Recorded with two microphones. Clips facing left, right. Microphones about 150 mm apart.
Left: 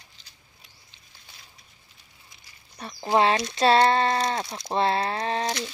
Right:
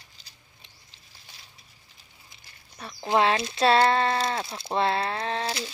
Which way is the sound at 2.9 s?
5° left (ahead or behind).